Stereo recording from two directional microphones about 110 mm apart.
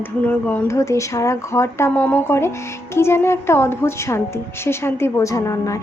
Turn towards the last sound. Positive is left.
turn(degrees=30)  # may be behind; listen again after turning